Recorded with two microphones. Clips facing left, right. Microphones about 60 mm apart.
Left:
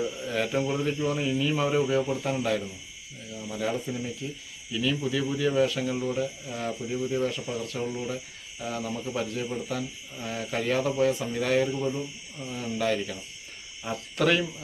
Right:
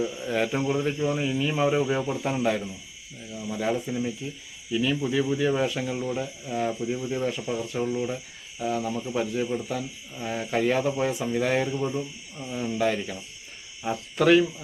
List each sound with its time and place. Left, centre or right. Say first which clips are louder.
0.2 s speech: right 2 dB; centre
5.8 s speech: left 1 dB; centre